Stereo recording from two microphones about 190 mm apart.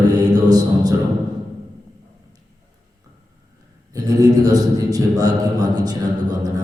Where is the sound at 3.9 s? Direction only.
20° right (ahead or behind).